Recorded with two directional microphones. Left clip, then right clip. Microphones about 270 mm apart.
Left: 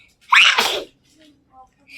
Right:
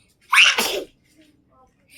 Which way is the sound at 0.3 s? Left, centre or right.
Centre.